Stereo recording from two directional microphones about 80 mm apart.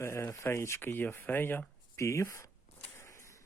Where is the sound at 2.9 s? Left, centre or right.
Left.